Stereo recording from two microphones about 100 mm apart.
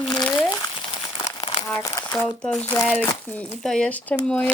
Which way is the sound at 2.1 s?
5° left (ahead or behind).